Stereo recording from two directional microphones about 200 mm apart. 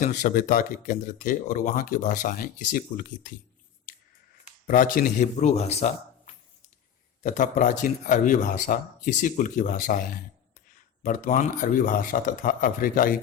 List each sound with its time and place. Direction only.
0.0 s speech: 40° left (ahead or behind)
4.4 s speech: 40° left (ahead or behind)